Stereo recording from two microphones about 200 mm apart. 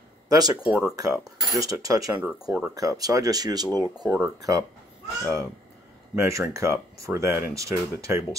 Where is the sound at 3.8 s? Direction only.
15° right (ahead or behind).